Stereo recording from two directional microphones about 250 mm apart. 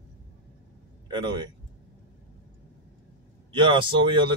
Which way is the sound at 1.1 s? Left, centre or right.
Centre.